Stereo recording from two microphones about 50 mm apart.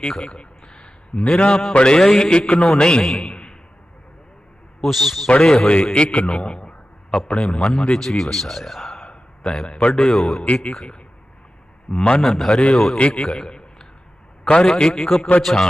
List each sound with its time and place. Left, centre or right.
0.0 s a sound: centre
1.8 s a man's voice: centre
4.8 s speech: centre
5.3 s a man's voice: centre
8.0 s speech: centre
9.0 s a sound: centre
9.9 s speech: centre
10.3 s speech: left
11.9 s a man's voice: centre
12.2 s speech: centre
12.5 s speech: centre
13.2 s a sound: centre
14.4 s a man's voice: left
14.7 s speech: centre